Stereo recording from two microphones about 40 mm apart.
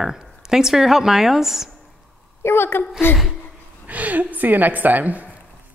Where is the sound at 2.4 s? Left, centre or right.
Left.